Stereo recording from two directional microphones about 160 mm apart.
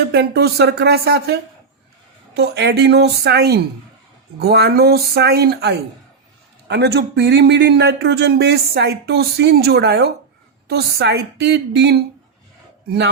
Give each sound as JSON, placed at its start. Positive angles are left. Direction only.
{"t": 0.1, "sound": "speech", "side_deg": -90}